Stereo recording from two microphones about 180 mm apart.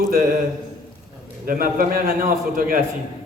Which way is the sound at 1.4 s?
50° right (ahead or behind).